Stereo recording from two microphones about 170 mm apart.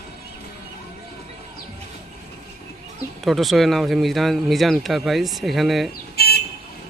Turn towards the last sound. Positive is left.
turn(degrees=70)  # may be behind; listen again after turning